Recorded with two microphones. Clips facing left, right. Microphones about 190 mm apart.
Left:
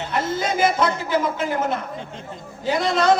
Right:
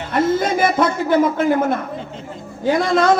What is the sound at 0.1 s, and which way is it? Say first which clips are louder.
A man's voice: right 7 dB; 50° right (ahead or behind).